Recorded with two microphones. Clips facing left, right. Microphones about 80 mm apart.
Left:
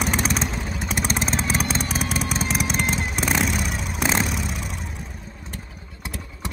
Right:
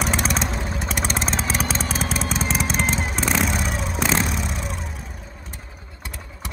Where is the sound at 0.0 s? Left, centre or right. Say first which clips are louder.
Even; centre.